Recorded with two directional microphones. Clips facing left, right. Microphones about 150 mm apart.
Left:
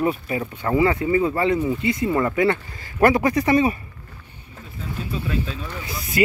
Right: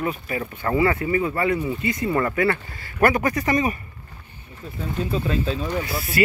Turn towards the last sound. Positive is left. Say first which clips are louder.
# left 1 dB
turn(degrees=20)  # may be behind; listen again after turning